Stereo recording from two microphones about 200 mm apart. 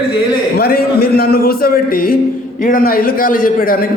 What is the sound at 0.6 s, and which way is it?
A man's voice, 50° left (ahead or behind).